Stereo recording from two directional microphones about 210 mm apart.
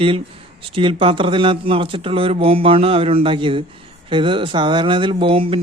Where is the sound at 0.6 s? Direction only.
25° right (ahead or behind).